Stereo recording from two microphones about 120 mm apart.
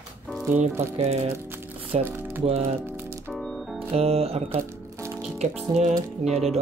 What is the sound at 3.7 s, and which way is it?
Music, 55° right (ahead or behind).